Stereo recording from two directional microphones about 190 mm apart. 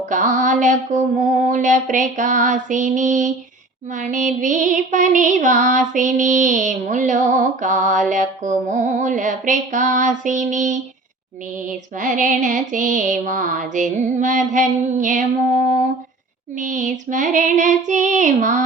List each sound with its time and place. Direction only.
0.0 s music: 40° right (ahead or behind)
11.9 s music: 40° right (ahead or behind)
16.6 s music: 40° right (ahead or behind)